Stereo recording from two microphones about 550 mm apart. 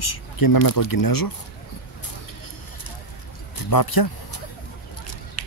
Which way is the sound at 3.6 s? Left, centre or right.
Left.